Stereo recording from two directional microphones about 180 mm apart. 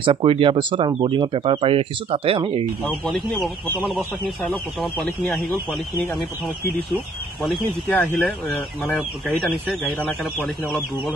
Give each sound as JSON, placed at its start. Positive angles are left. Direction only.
{"t": 0.0, "sound": "speech", "side_deg": -30}
{"t": 2.8, "sound": "speech", "side_deg": 0}
{"t": 7.4, "sound": "speech", "side_deg": 0}
{"t": 10.4, "sound": "speech", "side_deg": 0}